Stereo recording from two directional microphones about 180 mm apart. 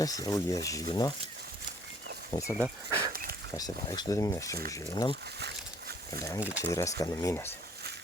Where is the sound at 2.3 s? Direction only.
25° left (ahead or behind).